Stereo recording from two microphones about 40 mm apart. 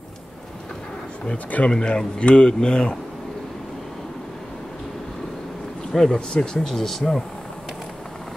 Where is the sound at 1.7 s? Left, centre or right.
Left.